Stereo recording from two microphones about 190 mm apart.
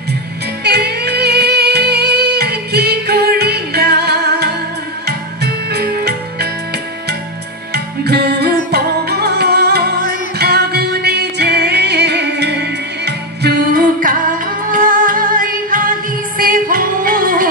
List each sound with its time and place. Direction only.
0.7 s music: 60° right (ahead or behind)
7.7 s music: 60° right (ahead or behind)